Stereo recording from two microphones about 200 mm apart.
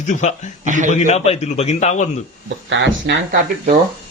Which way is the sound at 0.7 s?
40° right (ahead or behind).